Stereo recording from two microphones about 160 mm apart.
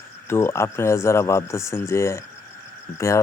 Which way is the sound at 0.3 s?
15° left (ahead or behind).